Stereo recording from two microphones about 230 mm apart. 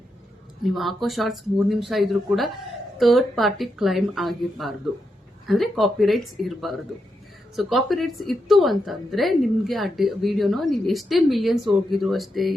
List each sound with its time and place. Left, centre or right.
0.6 s a woman's voice: centre